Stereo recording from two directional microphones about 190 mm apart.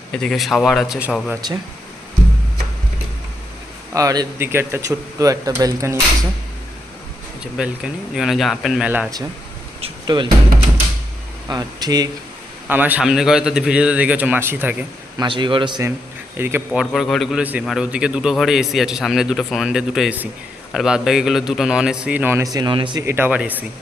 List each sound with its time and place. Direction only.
0.1 s a man's voice: 5° left (ahead or behind)
3.9 s a man's voice: 20° right (ahead or behind)
7.5 s a man's voice: 5° right (ahead or behind)
9.8 s music: 25° right (ahead or behind)
11.4 s a man's voice: 20° right (ahead or behind)
12.6 s a man's voice: 10° right (ahead or behind)
15.2 s a man's voice: 25° right (ahead or behind)
16.4 s a man's voice: 10° right (ahead or behind)
16.8 s a man's voice: centre (ahead or behind)
22.5 s a man's voice: 25° right (ahead or behind)
23.0 s a man's voice: 10° right (ahead or behind)